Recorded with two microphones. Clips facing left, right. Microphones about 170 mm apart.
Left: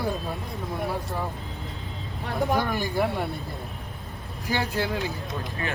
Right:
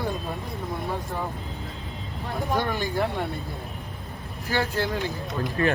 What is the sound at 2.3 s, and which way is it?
Speech, centre (ahead or behind).